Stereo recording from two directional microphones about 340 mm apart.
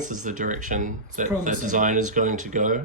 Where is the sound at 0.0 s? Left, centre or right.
Right.